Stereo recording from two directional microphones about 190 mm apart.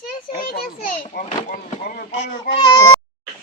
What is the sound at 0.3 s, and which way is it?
Speech, 50° left (ahead or behind).